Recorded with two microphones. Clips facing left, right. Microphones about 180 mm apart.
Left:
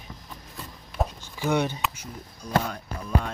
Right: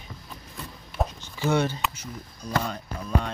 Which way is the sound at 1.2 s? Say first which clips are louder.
Right 1 dB; 10° left (ahead or behind).